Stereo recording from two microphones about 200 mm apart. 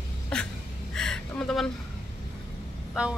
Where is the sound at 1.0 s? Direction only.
5° left (ahead or behind).